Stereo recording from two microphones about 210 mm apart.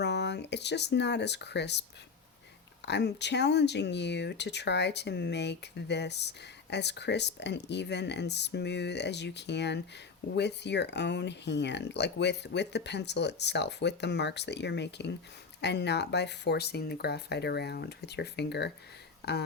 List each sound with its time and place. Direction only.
0.0 s speech: 55° left (ahead or behind)
2.8 s speech: 55° left (ahead or behind)